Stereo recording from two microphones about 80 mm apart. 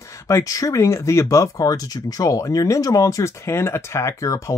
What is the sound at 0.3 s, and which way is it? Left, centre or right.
Speech, left.